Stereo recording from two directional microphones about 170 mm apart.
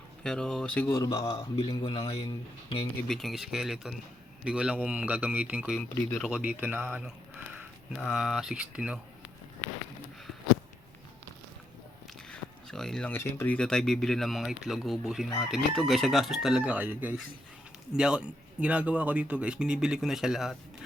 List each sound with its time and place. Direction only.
0.2 s speech: 5° left (ahead or behind)
1.3 s a man's voice: 35° left (ahead or behind)
3.1 s a man's voice: centre (ahead or behind)
5.9 s speech: 15° left (ahead or behind)
6.2 s a man's voice: 5° right (ahead or behind)
12.3 s speech: 5° left (ahead or behind)